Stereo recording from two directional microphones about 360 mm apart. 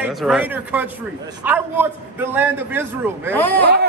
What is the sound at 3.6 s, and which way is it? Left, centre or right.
Speech, right.